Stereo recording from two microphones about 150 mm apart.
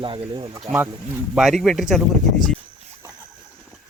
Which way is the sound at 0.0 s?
35° right (ahead or behind).